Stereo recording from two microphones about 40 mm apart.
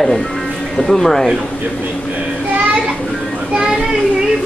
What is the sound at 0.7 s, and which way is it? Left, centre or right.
Speech, centre.